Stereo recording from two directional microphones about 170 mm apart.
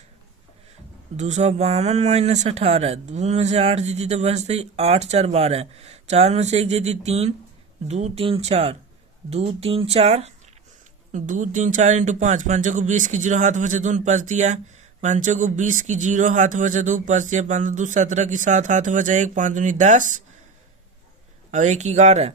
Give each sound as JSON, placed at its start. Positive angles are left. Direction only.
{"t": 1.1, "sound": "speech", "side_deg": -45}
{"t": 21.5, "sound": "speech", "side_deg": -45}